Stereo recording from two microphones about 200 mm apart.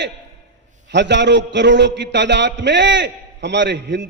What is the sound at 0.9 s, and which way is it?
A man's voice, 60° right (ahead or behind).